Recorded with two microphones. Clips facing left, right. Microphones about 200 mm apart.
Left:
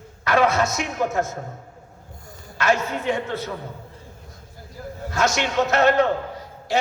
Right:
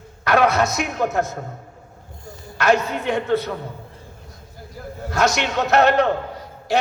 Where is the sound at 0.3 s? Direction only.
65° right (ahead or behind).